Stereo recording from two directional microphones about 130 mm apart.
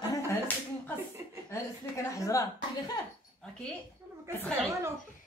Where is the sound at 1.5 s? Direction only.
25° left (ahead or behind).